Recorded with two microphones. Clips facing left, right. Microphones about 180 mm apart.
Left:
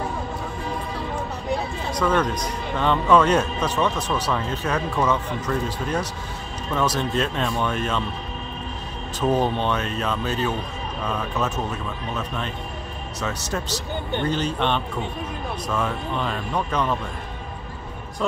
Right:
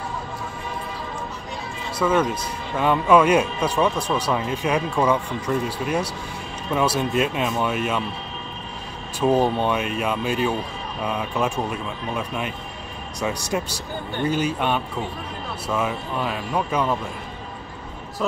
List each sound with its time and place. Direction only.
1.9 s a man's voice: 5° right (ahead or behind)
6.7 s a man's voice: 10° right (ahead or behind)
9.2 s a man's voice: 10° right (ahead or behind)